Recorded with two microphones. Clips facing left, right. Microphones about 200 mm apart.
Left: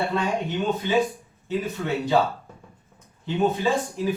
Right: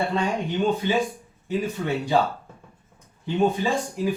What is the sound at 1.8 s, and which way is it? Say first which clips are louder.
Speech: left 1 dB; 35° right (ahead or behind).